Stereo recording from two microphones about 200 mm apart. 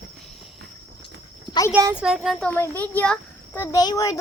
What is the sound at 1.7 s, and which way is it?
A child's voice, 10° right (ahead or behind).